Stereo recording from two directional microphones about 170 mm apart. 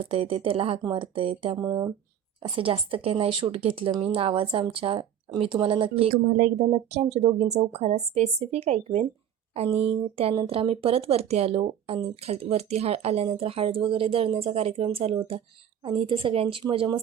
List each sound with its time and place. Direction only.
0.0 s speech: 35° right (ahead or behind)
1.5 s speech: 20° right (ahead or behind)
2.4 s speech: 30° right (ahead or behind)
6.2 s speech: 50° right (ahead or behind)
6.7 s speech: 35° right (ahead or behind)
9.7 s speech: 5° right (ahead or behind)
10.2 s speech: 35° right (ahead or behind)